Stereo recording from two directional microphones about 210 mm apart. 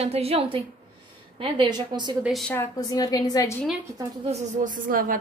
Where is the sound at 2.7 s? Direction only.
20° left (ahead or behind).